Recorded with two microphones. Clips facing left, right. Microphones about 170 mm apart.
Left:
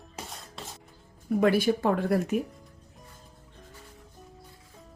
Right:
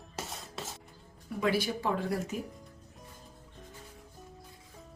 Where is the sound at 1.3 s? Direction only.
55° left (ahead or behind).